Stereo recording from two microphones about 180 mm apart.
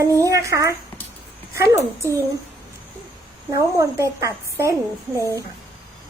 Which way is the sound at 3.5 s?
20° right (ahead or behind).